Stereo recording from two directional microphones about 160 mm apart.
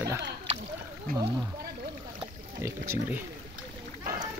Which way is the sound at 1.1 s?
65° right (ahead or behind).